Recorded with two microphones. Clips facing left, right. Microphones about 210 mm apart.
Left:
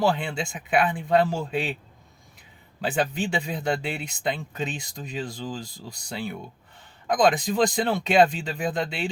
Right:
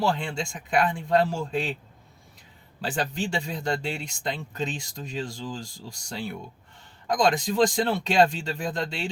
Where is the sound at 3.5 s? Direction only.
5° left (ahead or behind).